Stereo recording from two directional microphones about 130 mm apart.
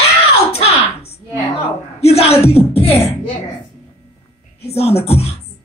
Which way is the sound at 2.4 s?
50° left (ahead or behind).